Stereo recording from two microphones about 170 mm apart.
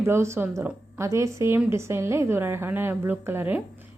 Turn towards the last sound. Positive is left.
turn(degrees=-10)  # may be behind; listen again after turning